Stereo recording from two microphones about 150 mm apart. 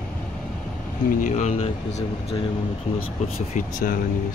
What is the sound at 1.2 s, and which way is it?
Speech, 55° left (ahead or behind).